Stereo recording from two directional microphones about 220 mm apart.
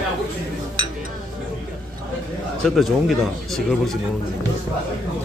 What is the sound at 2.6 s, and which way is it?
Speech, centre (ahead or behind).